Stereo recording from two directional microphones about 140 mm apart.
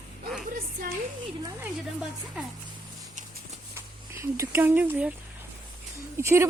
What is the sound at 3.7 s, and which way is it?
Speech, 20° right (ahead or behind).